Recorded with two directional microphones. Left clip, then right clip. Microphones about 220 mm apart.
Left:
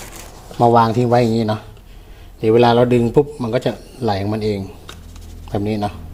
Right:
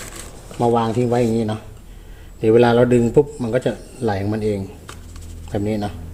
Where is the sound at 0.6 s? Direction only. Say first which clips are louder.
Left 5 dB; 20° left (ahead or behind).